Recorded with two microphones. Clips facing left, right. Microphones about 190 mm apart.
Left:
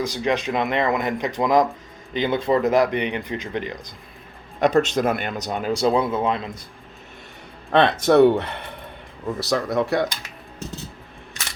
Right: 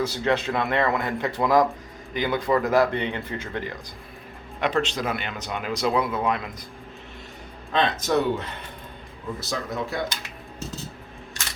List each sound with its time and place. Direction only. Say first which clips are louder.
0.0 s speech: left 1 dB; 15° left (ahead or behind)
4.6 s speech: left 6 dB; 45° left (ahead or behind); by 6.5 s 25° left (ahead or behind)
7.7 s speech: left 6 dB; 65° left (ahead or behind)